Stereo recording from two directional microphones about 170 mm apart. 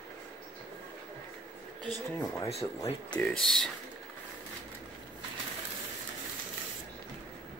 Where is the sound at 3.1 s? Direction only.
5° left (ahead or behind).